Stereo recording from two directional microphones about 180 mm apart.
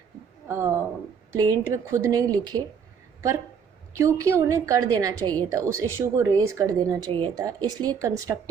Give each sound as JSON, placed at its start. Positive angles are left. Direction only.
{"t": 0.4, "sound": "speech", "side_deg": -15}
{"t": 3.9, "sound": "a woman's voice", "side_deg": -15}